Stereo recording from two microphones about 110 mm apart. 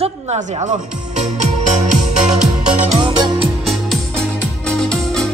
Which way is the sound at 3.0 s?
50° right (ahead or behind).